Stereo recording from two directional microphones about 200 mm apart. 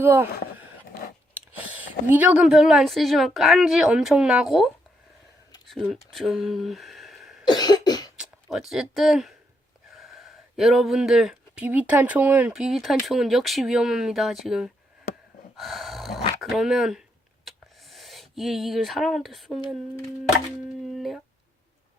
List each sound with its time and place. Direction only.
0.0 s speech: 10° right (ahead or behind)
1.3 s speech: 10° right (ahead or behind)
5.7 s speech: centre (ahead or behind)
7.4 s cough: 20° left (ahead or behind)
8.1 s speech: 5° right (ahead or behind)
15.5 s a sound: centre (ahead or behind)
20.8 s a sound: centre (ahead or behind)